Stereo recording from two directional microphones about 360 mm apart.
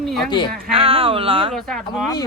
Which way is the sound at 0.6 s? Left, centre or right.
Centre.